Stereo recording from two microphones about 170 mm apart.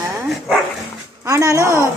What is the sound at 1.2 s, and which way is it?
Speech, 20° right (ahead or behind).